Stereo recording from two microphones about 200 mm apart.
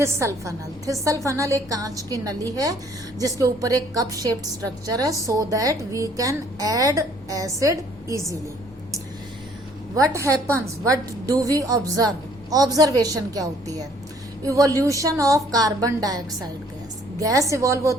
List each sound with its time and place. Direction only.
0.0 s a woman's voice: 15° right (ahead or behind)
9.9 s a woman's voice: 15° right (ahead or behind)